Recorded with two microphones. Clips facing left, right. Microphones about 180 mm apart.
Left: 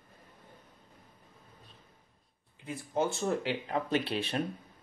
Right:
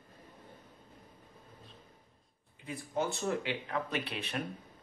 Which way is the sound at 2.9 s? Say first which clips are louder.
Left 3 dB; 30° left (ahead or behind).